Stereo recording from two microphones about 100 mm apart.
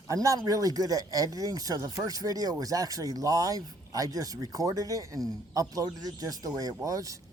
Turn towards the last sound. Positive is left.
turn(degrees=-35)  # may be behind; listen again after turning